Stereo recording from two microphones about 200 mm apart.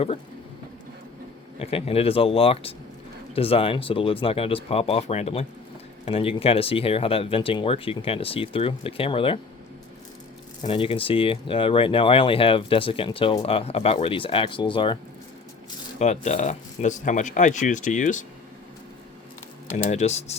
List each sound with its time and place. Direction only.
1.5 s speech: 30° left (ahead or behind)
10.6 s speech: 25° left (ahead or behind)
16.0 s speech: 35° left (ahead or behind)
19.7 s speech: 35° left (ahead or behind)